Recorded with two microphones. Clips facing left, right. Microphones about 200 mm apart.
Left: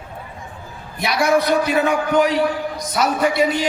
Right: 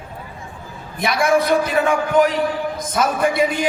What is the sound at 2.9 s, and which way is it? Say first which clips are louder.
Speech: even; 50° right (ahead or behind).